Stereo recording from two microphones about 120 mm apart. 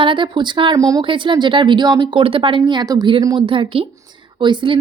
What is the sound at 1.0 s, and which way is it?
A woman's voice, 45° right (ahead or behind).